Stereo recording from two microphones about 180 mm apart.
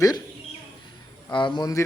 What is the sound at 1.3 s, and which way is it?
Speech, 25° left (ahead or behind).